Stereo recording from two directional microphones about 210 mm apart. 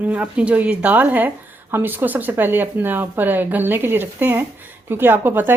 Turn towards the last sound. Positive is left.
turn(degrees=-10)  # may be behind; listen again after turning